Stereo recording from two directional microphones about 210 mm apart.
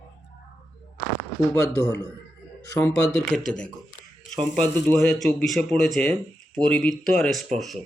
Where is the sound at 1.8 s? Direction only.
15° left (ahead or behind); by 7.8 s centre (ahead or behind).